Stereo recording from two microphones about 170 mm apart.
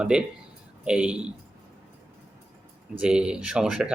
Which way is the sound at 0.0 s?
5° right (ahead or behind).